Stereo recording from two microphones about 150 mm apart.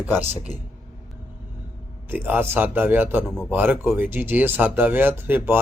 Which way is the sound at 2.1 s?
15° right (ahead or behind).